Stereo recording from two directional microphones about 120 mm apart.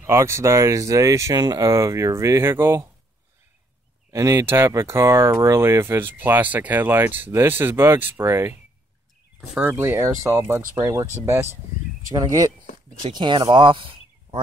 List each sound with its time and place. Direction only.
0.0 s speech: 25° right (ahead or behind)
4.1 s speech: 25° right (ahead or behind)
9.5 s speech: 10° right (ahead or behind); by 12.4 s 30° right (ahead or behind)
12.6 s a sound: 90° left
13.1 s speech: 40° right (ahead or behind)